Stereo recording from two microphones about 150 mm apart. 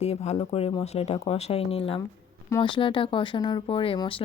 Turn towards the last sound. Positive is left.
turn(degrees=35)  # may be behind; listen again after turning